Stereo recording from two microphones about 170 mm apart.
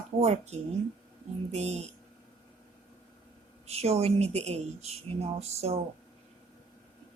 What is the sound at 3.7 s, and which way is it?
Speech, 40° right (ahead or behind).